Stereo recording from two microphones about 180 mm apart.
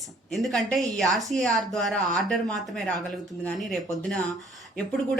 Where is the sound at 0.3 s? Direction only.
Centre (ahead or behind).